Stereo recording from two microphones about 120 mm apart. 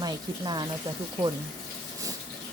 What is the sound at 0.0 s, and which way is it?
Speech, 35° right (ahead or behind).